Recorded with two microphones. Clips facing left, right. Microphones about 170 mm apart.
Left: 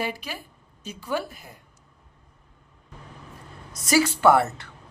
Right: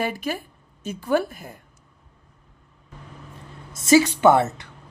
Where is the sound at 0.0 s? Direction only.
50° right (ahead or behind).